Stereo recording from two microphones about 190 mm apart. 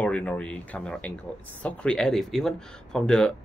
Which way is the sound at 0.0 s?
5° left (ahead or behind).